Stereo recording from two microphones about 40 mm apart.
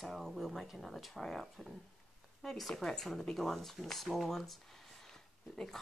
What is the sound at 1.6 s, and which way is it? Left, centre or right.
Speech, left.